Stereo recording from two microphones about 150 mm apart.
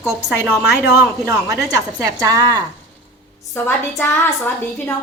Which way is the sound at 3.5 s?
15° left (ahead or behind).